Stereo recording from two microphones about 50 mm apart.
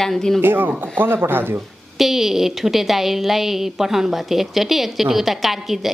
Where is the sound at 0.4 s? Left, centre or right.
Right.